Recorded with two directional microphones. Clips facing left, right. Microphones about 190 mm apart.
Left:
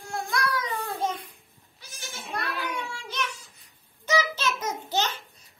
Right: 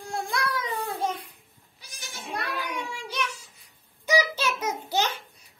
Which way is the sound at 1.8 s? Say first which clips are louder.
Left 1 dB; 15° right (ahead or behind).